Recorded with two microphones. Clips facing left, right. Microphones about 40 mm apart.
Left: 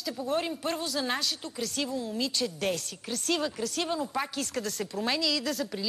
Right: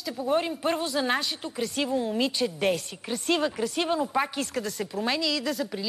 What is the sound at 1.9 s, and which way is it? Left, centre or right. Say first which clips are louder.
Speech: right 6 dB; right.